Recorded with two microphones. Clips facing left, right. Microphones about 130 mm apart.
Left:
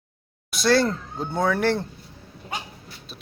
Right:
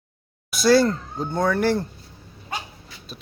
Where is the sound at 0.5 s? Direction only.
Centre (ahead or behind).